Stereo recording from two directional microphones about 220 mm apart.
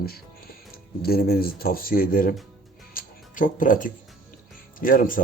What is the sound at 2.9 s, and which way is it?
Music, 35° left (ahead or behind).